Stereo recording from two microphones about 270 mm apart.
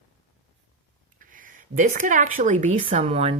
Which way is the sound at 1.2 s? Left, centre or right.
Right.